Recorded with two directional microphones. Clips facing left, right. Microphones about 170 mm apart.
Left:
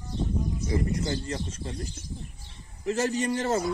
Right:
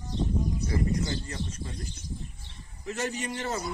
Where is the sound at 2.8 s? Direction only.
35° left (ahead or behind).